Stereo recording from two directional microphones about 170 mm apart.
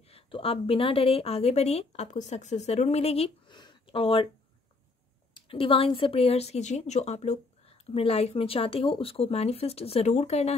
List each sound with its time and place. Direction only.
0.1 s speech: 35° left (ahead or behind)
5.3 s speech: 30° left (ahead or behind)